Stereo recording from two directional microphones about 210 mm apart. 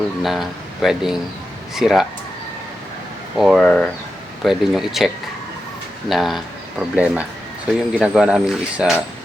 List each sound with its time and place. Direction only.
0.2 s speech: centre (ahead or behind)
3.3 s speech: centre (ahead or behind)